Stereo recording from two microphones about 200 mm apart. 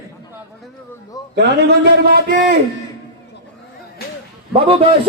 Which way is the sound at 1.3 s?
55° right (ahead or behind).